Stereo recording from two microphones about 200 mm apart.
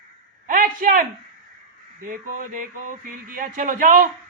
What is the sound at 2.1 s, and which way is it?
Speech, 45° right (ahead or behind).